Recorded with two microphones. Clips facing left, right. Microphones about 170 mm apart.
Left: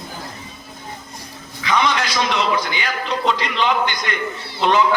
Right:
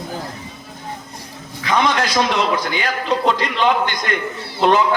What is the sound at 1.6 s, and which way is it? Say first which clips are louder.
A man's voice: right 2 dB; 45° right (ahead or behind).